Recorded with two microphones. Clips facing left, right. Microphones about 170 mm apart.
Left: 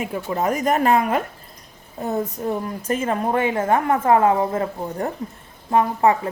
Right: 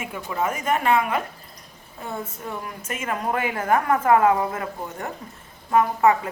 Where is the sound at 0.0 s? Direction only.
35° left (ahead or behind).